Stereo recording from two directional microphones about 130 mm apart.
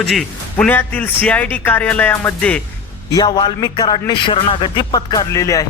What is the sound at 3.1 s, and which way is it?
A man's voice, 30° left (ahead or behind).